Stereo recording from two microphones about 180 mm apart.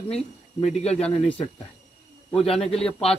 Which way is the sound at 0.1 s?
35° left (ahead or behind).